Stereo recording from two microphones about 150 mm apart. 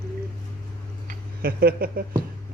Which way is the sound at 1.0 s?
90° right.